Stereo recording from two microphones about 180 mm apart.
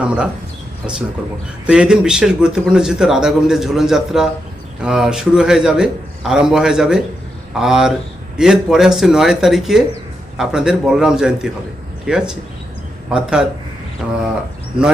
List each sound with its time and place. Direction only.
0.0 s speech: 5° right (ahead or behind)
1.6 s a man's voice: 5° right (ahead or behind)
14.0 s a sound: 5° right (ahead or behind)